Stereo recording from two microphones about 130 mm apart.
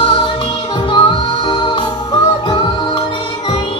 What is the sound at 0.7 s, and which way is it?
Music, 40° left (ahead or behind).